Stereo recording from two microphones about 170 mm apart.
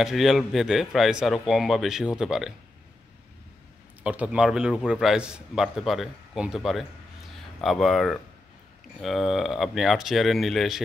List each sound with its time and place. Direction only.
0.0 s a man's voice: centre (ahead or behind)
4.0 s a man's voice: 10° right (ahead or behind)